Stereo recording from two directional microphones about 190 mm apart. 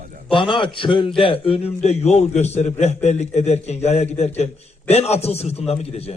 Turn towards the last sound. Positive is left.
turn(degrees=30)  # may be behind; listen again after turning